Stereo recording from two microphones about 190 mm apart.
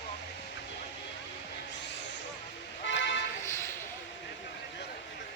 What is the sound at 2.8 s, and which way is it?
Vehicle, 70° left (ahead or behind).